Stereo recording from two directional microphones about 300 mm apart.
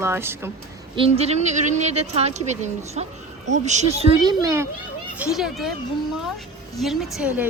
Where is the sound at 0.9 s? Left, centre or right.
Centre.